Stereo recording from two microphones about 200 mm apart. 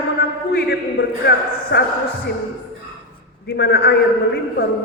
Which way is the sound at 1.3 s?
55° left (ahead or behind).